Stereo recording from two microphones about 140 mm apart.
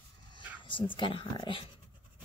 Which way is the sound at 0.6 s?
35° left (ahead or behind).